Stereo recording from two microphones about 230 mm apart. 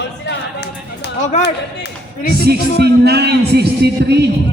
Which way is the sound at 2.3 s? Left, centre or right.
Right.